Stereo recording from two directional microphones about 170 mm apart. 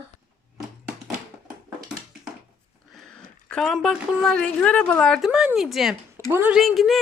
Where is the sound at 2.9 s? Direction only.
Centre (ahead or behind).